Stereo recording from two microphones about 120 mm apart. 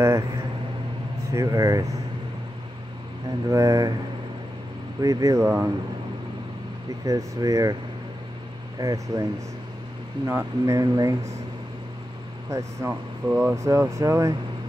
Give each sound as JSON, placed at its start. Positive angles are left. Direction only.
{"t": 0.0, "sound": "a sound", "side_deg": -25}
{"t": 1.3, "sound": "speech", "side_deg": -25}
{"t": 3.4, "sound": "speech", "side_deg": -30}
{"t": 5.0, "sound": "speech", "side_deg": -25}
{"t": 7.1, "sound": "speech", "side_deg": -30}
{"t": 8.7, "sound": "speech", "side_deg": -30}
{"t": 12.4, "sound": "speech", "side_deg": -25}